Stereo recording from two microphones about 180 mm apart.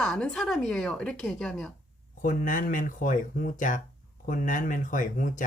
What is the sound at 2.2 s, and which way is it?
Speech, 50° left (ahead or behind).